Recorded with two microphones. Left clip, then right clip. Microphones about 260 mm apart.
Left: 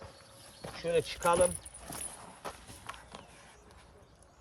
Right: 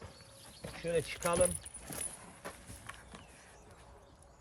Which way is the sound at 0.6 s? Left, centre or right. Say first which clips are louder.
Left 4 dB; left.